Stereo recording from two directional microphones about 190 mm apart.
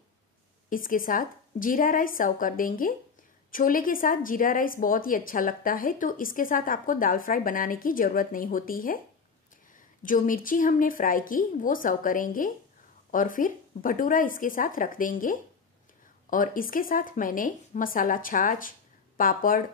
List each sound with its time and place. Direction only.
0.7 s a woman's voice: 45° left (ahead or behind)
10.0 s a woman's voice: 45° left (ahead or behind)